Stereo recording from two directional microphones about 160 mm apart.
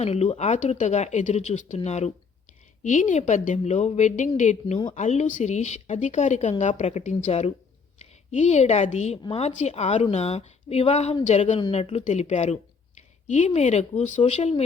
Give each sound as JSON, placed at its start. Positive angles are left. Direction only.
{"t": 0.0, "sound": "a woman's voice", "side_deg": 40}